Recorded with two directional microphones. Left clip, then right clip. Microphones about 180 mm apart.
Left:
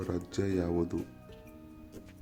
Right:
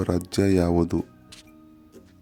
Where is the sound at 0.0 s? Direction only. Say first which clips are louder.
Right 10 dB; 50° right (ahead or behind).